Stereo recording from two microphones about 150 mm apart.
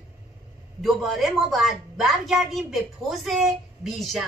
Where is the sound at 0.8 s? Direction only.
Centre (ahead or behind).